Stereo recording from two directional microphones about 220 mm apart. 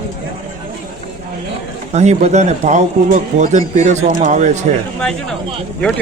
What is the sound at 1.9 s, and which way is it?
Speech, 30° right (ahead or behind).